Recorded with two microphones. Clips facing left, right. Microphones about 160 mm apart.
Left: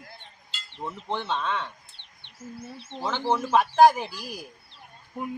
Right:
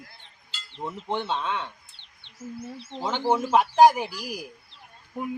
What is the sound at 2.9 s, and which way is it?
Speech, 20° right (ahead or behind).